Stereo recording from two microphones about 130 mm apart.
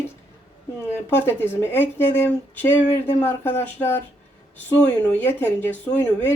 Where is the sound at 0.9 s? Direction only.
15° left (ahead or behind).